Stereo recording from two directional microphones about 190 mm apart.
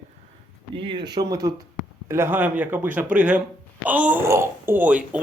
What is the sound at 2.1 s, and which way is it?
Speech, 10° right (ahead or behind).